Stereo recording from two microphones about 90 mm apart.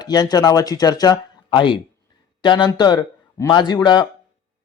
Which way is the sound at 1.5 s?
60° left (ahead or behind).